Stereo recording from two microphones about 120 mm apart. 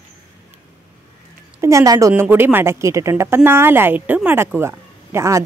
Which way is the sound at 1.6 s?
30° right (ahead or behind).